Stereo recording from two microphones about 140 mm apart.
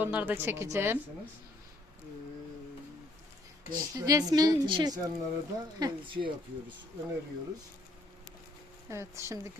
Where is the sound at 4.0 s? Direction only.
25° right (ahead or behind).